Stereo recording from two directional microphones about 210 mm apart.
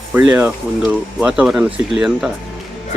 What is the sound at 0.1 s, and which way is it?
Speech, 5° right (ahead or behind).